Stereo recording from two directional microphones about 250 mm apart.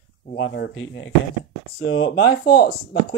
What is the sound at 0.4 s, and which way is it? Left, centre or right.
Speech, left.